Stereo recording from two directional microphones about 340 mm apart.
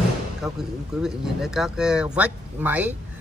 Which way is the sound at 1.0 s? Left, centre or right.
Centre.